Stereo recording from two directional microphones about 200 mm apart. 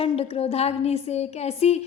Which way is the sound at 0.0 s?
30° left (ahead or behind).